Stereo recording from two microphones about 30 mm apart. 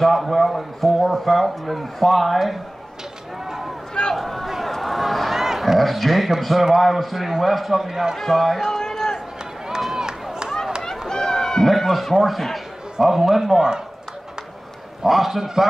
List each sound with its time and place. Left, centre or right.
0.0 s a man's voice: centre
3.4 s a sound: centre
4.2 s speech: centre
4.6 s a sound: centre
5.4 s crowd: centre
5.8 s a man's voice: centre
8.2 s a man's voice: centre
8.6 s a sound: centre
9.9 s run: right
10.8 s run: centre
11.6 s a man's voice: centre
15.0 s a man's voice: centre